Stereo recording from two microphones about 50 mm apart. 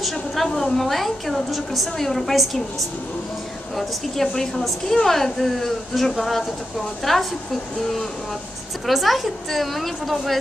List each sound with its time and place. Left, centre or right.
0.5 s a woman's voice: centre
3.7 s a woman's voice: centre
8.8 s a woman's voice: centre